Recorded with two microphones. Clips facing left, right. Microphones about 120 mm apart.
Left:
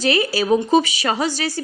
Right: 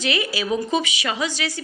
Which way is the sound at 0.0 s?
40° left (ahead or behind).